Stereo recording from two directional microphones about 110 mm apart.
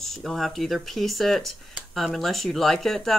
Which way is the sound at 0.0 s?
Centre (ahead or behind).